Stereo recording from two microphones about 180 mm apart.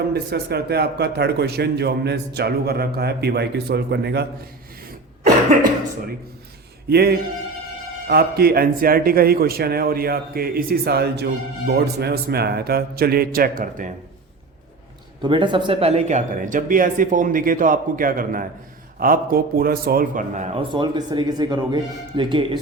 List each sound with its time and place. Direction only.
0.1 s a man's voice: 65° right (ahead or behind)
6.8 s a man's voice: 60° right (ahead or behind); by 13.9 s 45° right (ahead or behind)
15.2 s a man's voice: 25° right (ahead or behind); by 20.5 s 50° right (ahead or behind)
20.6 s speech: 25° right (ahead or behind)